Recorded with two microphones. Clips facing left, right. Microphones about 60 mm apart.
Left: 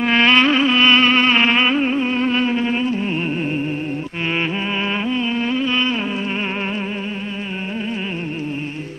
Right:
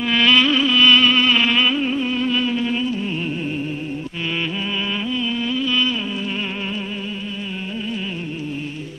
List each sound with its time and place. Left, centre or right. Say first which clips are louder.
0.0 s music: left 2 dB; left
5.1 s music: left 3 dB; left